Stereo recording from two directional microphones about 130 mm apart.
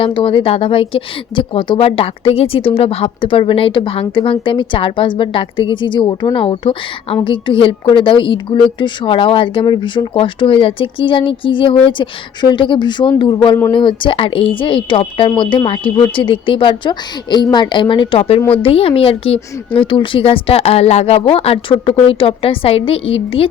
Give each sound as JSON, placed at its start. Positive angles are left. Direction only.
{"t": 0.0, "sound": "a woman's voice", "side_deg": 40}